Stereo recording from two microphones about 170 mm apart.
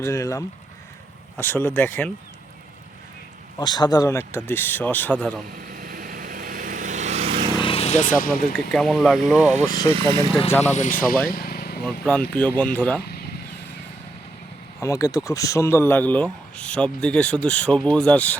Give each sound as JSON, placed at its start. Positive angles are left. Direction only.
{"t": 0.0, "sound": "speech", "side_deg": 15}
{"t": 3.6, "sound": "speech", "side_deg": 25}
{"t": 5.6, "sound": "vehicle", "side_deg": -55}
{"t": 7.6, "sound": "vehicle", "side_deg": 35}
{"t": 8.5, "sound": "speech", "side_deg": 0}
{"t": 9.6, "sound": "speech", "side_deg": 25}
{"t": 10.5, "sound": "speech", "side_deg": 10}
{"t": 10.8, "sound": "speech", "side_deg": 50}
{"t": 11.3, "sound": "vehicle", "side_deg": 60}
{"t": 11.9, "sound": "speech", "side_deg": 5}
{"t": 13.0, "sound": "vehicle", "side_deg": 70}
{"t": 14.8, "sound": "speech", "side_deg": 20}